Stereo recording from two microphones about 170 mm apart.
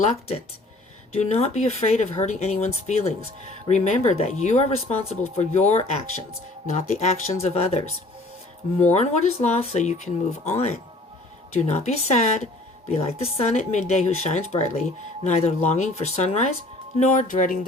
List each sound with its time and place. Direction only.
0.0 s speech: 35° left (ahead or behind); by 17.7 s 55° left (ahead or behind)